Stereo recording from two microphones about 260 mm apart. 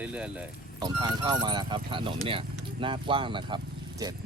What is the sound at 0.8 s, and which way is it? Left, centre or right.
Speech, centre.